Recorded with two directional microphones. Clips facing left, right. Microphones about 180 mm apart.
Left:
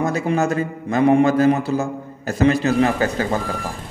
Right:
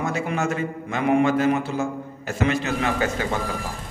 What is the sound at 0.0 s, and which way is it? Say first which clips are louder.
A man's voice: left 5 dB; 40° left (ahead or behind).